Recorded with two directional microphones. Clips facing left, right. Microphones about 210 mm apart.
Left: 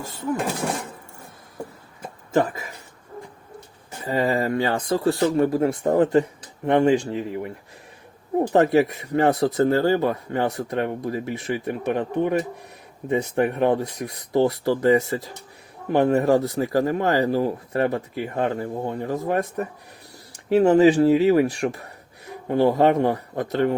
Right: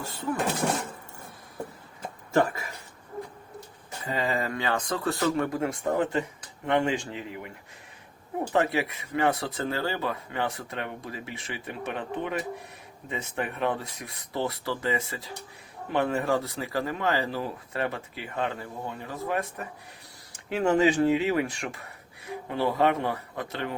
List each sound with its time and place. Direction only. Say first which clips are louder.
0.3 s speech: even; centre (ahead or behind)
4.1 s speech: left 7 dB; 35° left (ahead or behind)